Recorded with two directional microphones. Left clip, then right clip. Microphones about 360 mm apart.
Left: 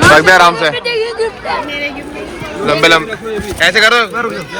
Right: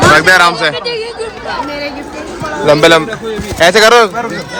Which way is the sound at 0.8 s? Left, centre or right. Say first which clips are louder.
Left 3 dB; centre.